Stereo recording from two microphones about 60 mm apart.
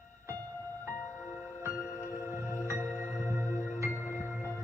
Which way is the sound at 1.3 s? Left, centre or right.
Right.